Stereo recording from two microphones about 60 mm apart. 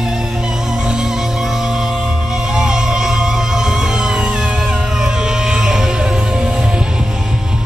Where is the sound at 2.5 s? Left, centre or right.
Centre.